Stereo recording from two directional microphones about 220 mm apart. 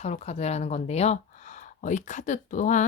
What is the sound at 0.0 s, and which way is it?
Speech, 30° left (ahead or behind).